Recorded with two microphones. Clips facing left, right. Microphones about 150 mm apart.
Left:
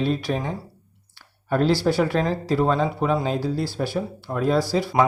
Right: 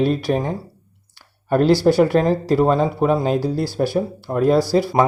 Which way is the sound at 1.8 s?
50° right (ahead or behind).